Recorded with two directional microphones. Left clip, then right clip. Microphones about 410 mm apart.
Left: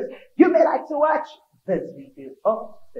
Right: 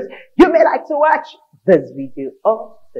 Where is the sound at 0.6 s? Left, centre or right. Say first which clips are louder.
Right 5 dB; right.